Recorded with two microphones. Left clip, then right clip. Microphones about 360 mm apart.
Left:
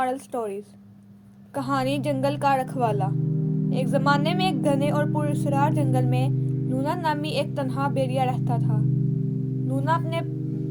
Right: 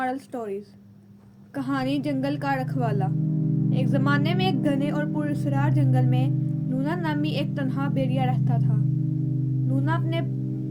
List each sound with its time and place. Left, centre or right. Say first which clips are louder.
0.0 s speech: left 3 dB; centre
1.5 s speech: left 2 dB; left
9.8 s speech: left 5 dB; left